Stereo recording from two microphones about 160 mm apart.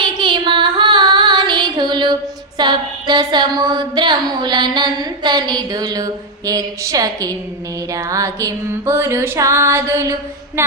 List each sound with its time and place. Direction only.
0.0 s female singing: 30° right (ahead or behind)
2.6 s a sound: 25° right (ahead or behind)
10.6 s music: 15° right (ahead or behind)